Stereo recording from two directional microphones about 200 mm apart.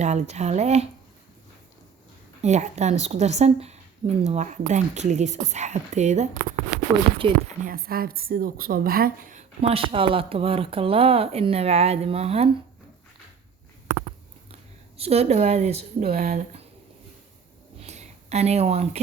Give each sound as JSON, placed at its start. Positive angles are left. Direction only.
{"t": 0.0, "sound": "a woman's voice", "side_deg": -35}
{"t": 2.4, "sound": "a woman's voice", "side_deg": -35}
{"t": 6.7, "sound": "a sound", "side_deg": 20}
{"t": 7.2, "sound": "speech", "side_deg": -25}
{"t": 7.6, "sound": "a woman's voice", "side_deg": -45}
{"t": 14.9, "sound": "a woman's voice", "side_deg": -30}
{"t": 17.7, "sound": "a sound", "side_deg": -35}